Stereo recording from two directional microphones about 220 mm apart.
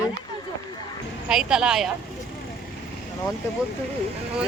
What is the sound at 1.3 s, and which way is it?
Speech, centre (ahead or behind).